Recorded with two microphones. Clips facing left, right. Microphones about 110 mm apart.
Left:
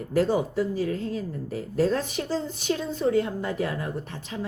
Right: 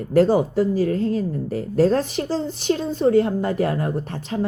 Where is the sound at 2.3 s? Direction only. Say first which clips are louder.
Right 4 dB; 30° right (ahead or behind).